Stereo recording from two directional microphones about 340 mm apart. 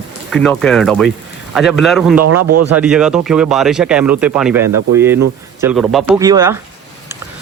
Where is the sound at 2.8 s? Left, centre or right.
Centre.